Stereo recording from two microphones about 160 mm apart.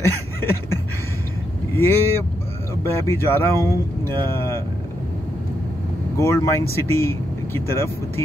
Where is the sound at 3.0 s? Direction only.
15° left (ahead or behind).